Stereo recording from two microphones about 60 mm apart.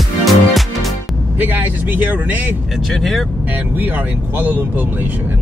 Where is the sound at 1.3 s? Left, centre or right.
Right.